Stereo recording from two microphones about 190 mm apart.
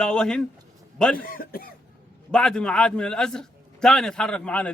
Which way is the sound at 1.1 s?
50° left (ahead or behind).